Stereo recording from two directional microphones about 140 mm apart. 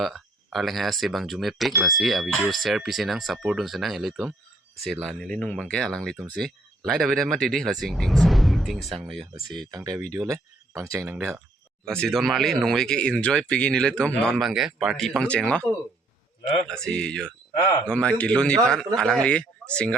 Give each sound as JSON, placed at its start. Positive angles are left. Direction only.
{"t": 0.0, "sound": "speech", "side_deg": 0}
{"t": 9.7, "sound": "speech", "side_deg": -25}
{"t": 10.8, "sound": "speech", "side_deg": -15}
{"t": 11.9, "sound": "speech", "side_deg": 5}
{"t": 16.6, "sound": "speech", "side_deg": 5}